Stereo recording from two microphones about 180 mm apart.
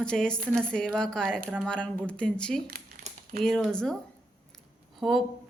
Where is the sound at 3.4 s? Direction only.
5° left (ahead or behind).